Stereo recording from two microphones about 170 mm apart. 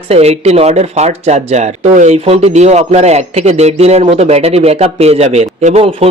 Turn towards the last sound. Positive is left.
turn(degrees=-40)  # may be behind; listen again after turning